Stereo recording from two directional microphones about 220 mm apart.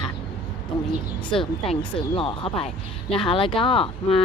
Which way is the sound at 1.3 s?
25° left (ahead or behind).